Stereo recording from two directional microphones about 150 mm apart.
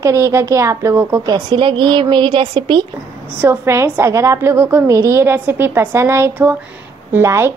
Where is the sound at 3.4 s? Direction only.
20° right (ahead or behind).